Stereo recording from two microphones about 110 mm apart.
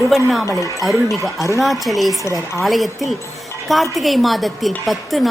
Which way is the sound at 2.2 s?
25° left (ahead or behind).